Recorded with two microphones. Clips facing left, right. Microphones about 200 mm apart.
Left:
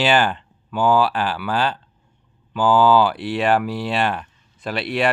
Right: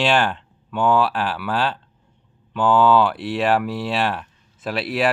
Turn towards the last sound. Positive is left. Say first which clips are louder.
# even
turn(degrees=0)  # may be behind; listen again after turning